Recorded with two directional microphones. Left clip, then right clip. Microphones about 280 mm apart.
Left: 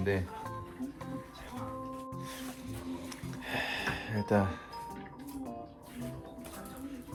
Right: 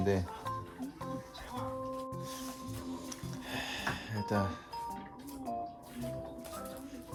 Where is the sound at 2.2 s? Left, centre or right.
Centre.